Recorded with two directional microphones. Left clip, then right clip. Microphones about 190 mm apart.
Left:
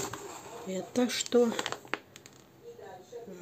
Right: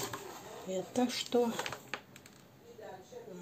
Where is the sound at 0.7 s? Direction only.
35° left (ahead or behind).